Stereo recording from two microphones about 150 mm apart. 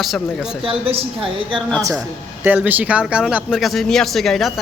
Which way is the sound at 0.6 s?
40° right (ahead or behind).